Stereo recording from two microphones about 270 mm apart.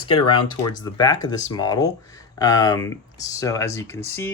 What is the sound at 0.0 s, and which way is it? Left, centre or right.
Speech, centre.